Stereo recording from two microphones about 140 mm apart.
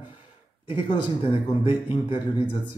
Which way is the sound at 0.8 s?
35° left (ahead or behind).